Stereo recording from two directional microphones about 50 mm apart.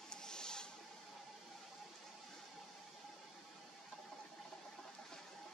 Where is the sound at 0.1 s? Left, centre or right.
Centre.